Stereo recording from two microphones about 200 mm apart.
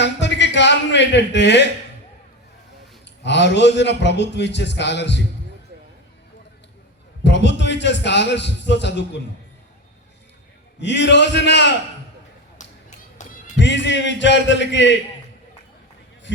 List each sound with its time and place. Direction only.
0.0 s a sound: 60° left (ahead or behind)
3.2 s a man's voice: 60° left (ahead or behind)
7.3 s a man's voice: 60° left (ahead or behind)
10.8 s a man's voice: 60° left (ahead or behind)
12.6 s a sound: 40° left (ahead or behind)
13.2 s music: 35° left (ahead or behind)
13.6 s a man's voice: 60° left (ahead or behind)